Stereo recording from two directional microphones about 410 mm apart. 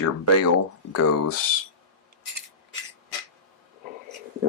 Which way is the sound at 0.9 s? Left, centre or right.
Left.